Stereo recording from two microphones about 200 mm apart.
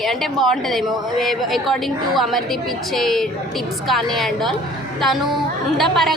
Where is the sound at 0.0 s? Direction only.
Centre (ahead or behind).